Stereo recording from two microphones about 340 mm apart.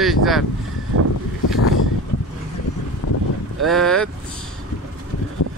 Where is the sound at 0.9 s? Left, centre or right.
Right.